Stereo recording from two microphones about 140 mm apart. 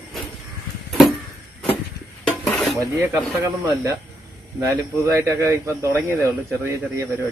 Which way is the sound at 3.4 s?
25° right (ahead or behind).